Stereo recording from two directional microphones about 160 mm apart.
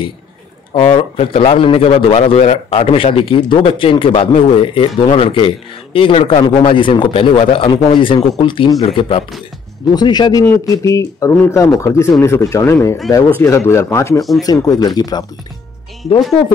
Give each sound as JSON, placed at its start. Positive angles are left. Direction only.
{"t": 0.7, "sound": "a man's voice", "side_deg": 35}